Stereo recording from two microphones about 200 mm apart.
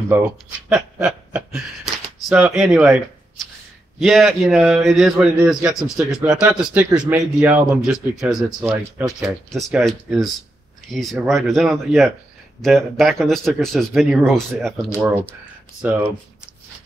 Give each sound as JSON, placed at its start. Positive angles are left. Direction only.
{"t": 0.1, "sound": "a man's voice", "side_deg": -5}
{"t": 4.0, "sound": "a man's voice", "side_deg": 0}
{"t": 8.5, "sound": "speech", "side_deg": -10}
{"t": 9.0, "sound": "a man's voice", "side_deg": 0}